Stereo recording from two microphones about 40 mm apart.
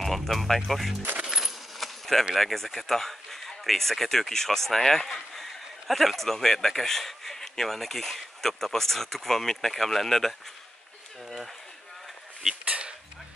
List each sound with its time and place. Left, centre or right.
0.0 s speech: centre
1.2 s coin: centre
1.8 s keys jangling: centre
2.3 s speech: centre
12.6 s a sound: right